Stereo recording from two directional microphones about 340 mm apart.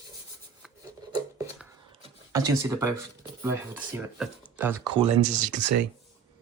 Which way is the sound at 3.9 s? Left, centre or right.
Centre.